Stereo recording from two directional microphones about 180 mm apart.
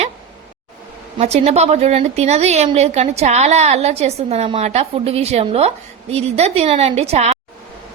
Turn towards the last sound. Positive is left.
turn(degrees=-35)  # may be behind; listen again after turning